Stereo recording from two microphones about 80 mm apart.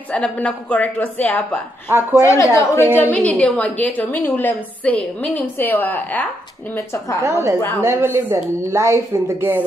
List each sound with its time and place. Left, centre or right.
0.1 s a woman's voice: centre
1.9 s speech: right
2.2 s a woman's voice: left
3.0 s a woman's voice: centre
6.7 s a woman's voice: left
7.2 s speech: right